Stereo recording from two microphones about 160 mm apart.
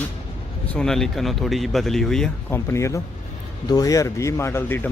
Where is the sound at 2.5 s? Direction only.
15° left (ahead or behind).